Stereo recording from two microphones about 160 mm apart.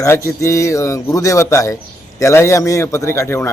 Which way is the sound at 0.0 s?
20° left (ahead or behind).